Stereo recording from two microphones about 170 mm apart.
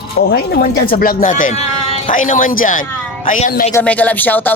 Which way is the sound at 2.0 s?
50° left (ahead or behind).